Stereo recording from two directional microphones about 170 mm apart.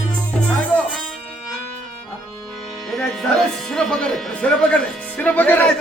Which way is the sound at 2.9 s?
Centre (ahead or behind).